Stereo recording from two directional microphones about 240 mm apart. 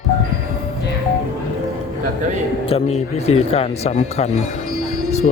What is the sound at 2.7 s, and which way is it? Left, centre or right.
Speech, left.